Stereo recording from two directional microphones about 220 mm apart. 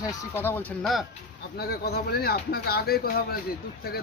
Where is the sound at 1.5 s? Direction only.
45° left (ahead or behind).